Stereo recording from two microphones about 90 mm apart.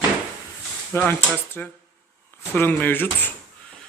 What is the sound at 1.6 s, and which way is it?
Speech, 15° left (ahead or behind).